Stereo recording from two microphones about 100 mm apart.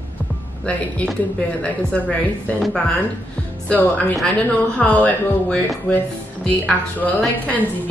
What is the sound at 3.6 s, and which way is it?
A woman's voice, 15° left (ahead or behind).